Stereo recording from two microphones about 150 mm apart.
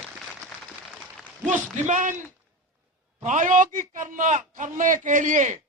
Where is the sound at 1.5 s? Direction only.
50° right (ahead or behind).